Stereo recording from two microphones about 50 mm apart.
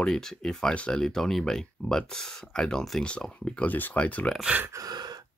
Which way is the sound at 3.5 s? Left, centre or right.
Left.